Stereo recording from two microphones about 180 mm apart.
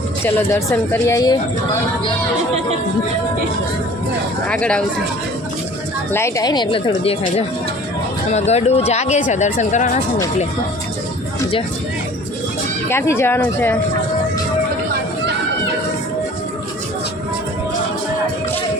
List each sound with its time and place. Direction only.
0.3 s speech: 15° left (ahead or behind)
4.4 s speech: 5° left (ahead or behind)
6.1 s speech: 15° left (ahead or behind); by 10.0 s 40° left (ahead or behind)
12.9 s speech: 15° left (ahead or behind)